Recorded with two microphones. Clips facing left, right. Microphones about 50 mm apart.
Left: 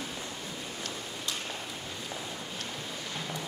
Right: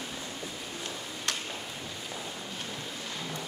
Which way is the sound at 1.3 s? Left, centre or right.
Right.